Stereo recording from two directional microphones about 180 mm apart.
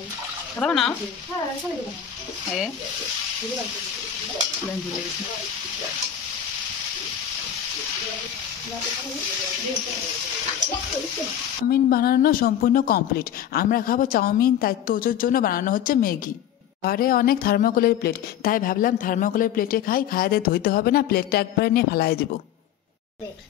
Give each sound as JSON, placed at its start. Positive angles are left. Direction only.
{"t": 0.6, "sound": "speech", "side_deg": 5}
{"t": 11.7, "sound": "a woman's voice", "side_deg": 55}